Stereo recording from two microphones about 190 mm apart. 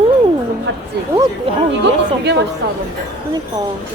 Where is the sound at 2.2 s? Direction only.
60° right (ahead or behind).